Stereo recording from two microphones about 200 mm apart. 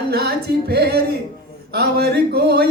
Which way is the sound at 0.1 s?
55° right (ahead or behind).